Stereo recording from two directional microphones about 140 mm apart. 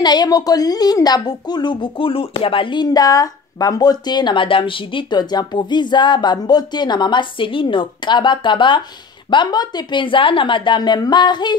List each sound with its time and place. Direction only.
0.0 s speech: 30° left (ahead or behind)